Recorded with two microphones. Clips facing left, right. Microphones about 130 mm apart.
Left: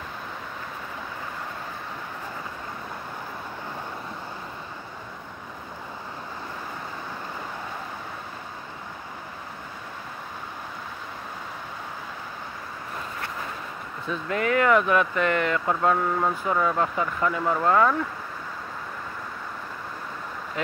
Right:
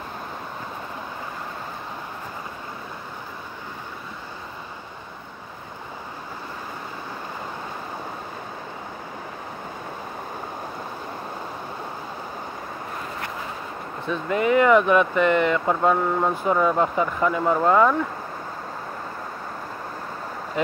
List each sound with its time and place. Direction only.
14.3 s speech: 15° right (ahead or behind)